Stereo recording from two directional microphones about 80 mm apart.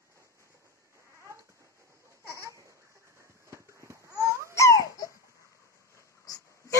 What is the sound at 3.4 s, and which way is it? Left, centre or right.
Cat, right.